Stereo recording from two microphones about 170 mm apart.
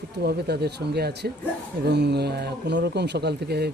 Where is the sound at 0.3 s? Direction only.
70° right (ahead or behind).